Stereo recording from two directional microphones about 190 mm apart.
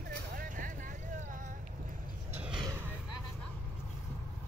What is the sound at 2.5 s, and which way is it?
Vehicle, 25° right (ahead or behind).